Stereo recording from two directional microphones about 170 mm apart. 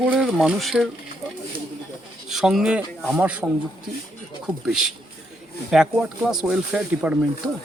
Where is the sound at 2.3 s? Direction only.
Centre (ahead or behind).